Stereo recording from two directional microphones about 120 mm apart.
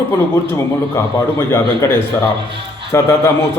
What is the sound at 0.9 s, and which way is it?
Speech, 20° left (ahead or behind).